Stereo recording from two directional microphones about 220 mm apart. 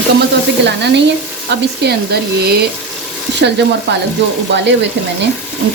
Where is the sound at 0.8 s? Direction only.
50° right (ahead or behind).